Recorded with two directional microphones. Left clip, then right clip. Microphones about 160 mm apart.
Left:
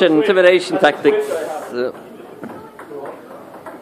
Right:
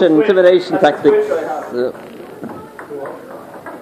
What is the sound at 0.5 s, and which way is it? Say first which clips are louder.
A man's voice: right 2 dB; 10° left (ahead or behind).